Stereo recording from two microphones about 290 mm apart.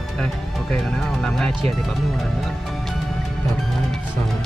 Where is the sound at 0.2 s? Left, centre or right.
Centre.